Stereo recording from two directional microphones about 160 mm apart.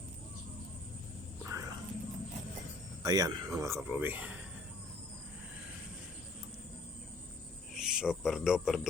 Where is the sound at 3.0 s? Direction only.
25° right (ahead or behind).